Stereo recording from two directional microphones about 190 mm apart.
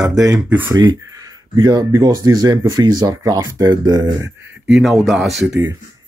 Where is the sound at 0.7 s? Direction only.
20° right (ahead or behind).